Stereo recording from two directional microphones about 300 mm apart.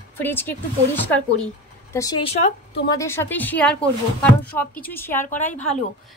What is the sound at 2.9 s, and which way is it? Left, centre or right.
A woman's voice, centre.